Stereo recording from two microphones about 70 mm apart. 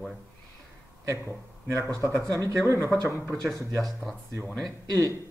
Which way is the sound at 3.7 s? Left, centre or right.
Centre.